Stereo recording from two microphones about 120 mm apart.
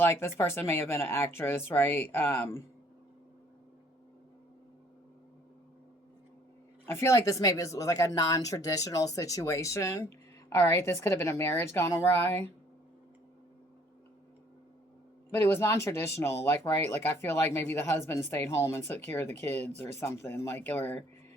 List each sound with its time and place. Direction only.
0.0 s speech: 20° left (ahead or behind)
6.8 s speech: 20° left (ahead or behind)
15.3 s speech: 20° left (ahead or behind)